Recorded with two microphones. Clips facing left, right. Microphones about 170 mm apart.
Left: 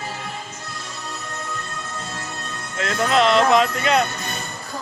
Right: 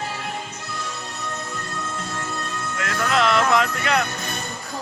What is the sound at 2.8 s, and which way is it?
Speech, 25° left (ahead or behind).